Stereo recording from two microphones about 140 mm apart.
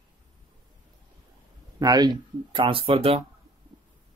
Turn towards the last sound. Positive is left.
turn(degrees=-45)  # may be behind; listen again after turning